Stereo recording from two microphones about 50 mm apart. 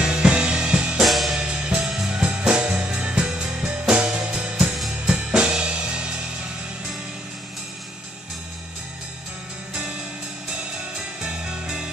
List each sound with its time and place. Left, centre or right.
0.0 s music: centre
0.9 s music: centre
1.4 s music: right
1.9 s music: centre
2.2 s music: right
5.0 s drum kit: centre
11.2 s music: centre